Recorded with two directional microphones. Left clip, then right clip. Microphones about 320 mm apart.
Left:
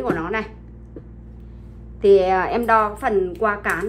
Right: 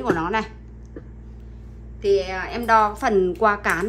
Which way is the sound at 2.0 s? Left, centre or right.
Centre.